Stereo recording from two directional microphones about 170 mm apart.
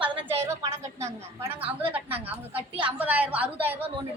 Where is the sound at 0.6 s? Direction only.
15° right (ahead or behind).